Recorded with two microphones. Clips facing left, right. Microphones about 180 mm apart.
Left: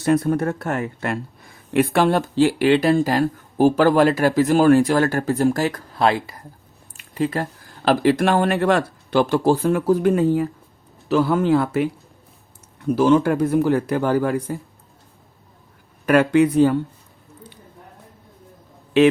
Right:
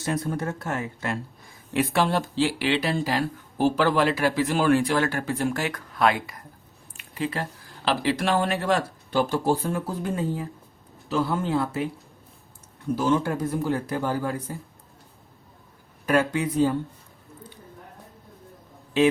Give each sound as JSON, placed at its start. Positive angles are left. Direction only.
{"t": 0.0, "sound": "speech", "side_deg": 60}
{"t": 6.9, "sound": "a sound", "side_deg": 40}
{"t": 7.9, "sound": "speech", "side_deg": 50}
{"t": 13.0, "sound": "speech", "side_deg": 75}
{"t": 16.0, "sound": "speech", "side_deg": 70}